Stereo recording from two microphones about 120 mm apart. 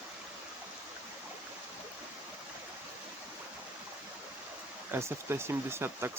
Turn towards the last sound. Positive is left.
turn(degrees=-20)  # may be behind; listen again after turning